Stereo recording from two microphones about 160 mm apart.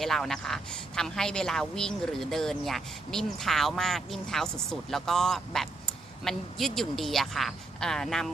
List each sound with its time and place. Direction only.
0.0 s a woman's voice: centre (ahead or behind)